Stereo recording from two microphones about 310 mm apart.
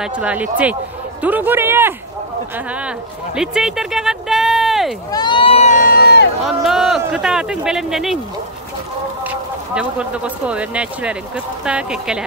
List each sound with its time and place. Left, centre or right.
0.0 s speech: centre
5.1 s speech: centre; by 6.2 s left
6.4 s speech: centre
9.2 s speech: centre